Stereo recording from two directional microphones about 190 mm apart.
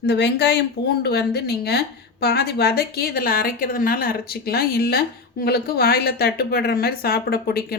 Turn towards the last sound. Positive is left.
turn(degrees=55)  # may be behind; listen again after turning